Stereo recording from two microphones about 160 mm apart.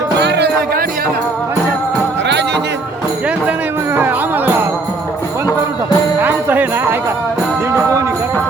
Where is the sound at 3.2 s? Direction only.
10° right (ahead or behind).